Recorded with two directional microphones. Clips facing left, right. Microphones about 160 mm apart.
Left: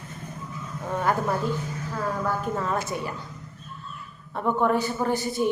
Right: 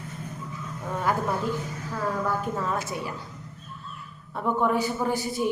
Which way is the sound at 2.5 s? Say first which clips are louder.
Left 2 dB; 5° right (ahead or behind).